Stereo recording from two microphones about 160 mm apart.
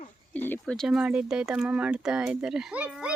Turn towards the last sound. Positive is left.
turn(degrees=-5)  # may be behind; listen again after turning